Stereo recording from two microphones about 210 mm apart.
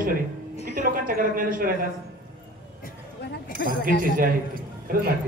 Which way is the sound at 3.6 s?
55° left (ahead or behind).